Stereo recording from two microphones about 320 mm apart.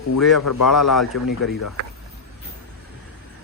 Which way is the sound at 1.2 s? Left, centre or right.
Left.